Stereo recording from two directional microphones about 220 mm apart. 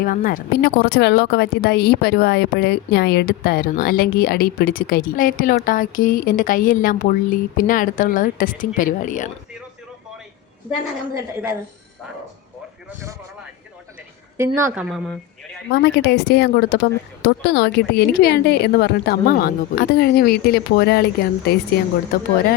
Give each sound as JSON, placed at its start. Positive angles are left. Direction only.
{"t": 0.0, "sound": "speech", "side_deg": 40}
{"t": 14.3, "sound": "a woman's voice", "side_deg": -10}
{"t": 14.8, "sound": "speech", "side_deg": 0}
{"t": 15.7, "sound": "a woman's voice", "side_deg": 45}